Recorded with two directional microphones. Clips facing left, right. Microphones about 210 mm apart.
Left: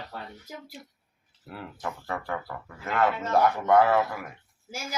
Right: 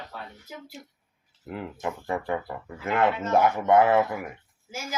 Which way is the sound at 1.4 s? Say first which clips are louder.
Right 4 dB; 20° right (ahead or behind).